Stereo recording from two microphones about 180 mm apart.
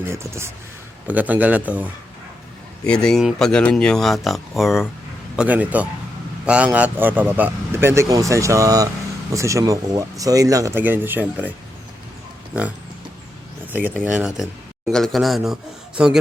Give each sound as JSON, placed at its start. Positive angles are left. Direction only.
{"t": 0.0, "sound": "speech", "side_deg": -15}
{"t": 2.8, "sound": "speech", "side_deg": 5}
{"t": 13.7, "sound": "speech", "side_deg": -10}